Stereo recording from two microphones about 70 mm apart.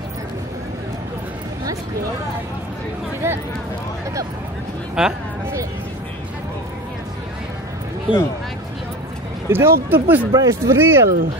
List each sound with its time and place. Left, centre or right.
3.2 s speech: right
5.0 s speech: centre
8.1 s speech: right
9.5 s speech: right
10.3 s speech: right